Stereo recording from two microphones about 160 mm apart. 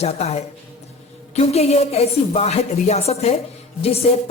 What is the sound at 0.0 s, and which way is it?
A man's voice, 40° left (ahead or behind).